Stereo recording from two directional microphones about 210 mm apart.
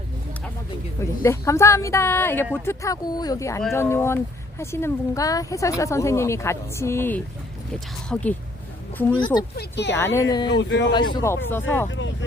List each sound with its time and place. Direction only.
1.2 s speech: 15° left (ahead or behind)
9.1 s speech: 20° left (ahead or behind)
9.6 s speech: 55° left (ahead or behind)
10.2 s speech: 15° left (ahead or behind)
10.6 s speech: 55° left (ahead or behind)
10.9 s speech: 20° left (ahead or behind)
11.9 s speech: 60° left (ahead or behind)